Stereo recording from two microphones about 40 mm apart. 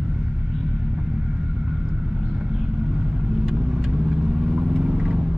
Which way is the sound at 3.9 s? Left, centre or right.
Right.